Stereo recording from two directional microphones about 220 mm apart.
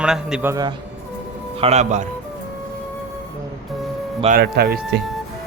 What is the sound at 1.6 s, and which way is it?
Speech, 30° right (ahead or behind).